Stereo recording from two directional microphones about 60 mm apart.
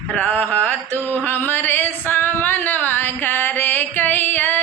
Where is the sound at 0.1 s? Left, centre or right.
Left.